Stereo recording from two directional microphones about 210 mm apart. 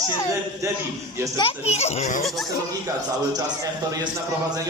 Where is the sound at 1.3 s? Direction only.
25° left (ahead or behind).